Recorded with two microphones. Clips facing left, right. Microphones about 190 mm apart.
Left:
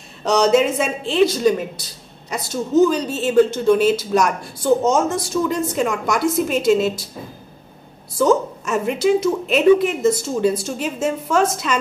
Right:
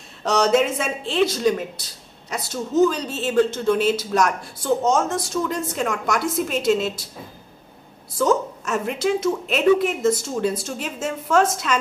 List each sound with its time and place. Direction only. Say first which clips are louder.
0.2 s a woman's voice: left 3 dB; 5° right (ahead or behind)
8.2 s a woman's voice: left 4 dB; centre (ahead or behind)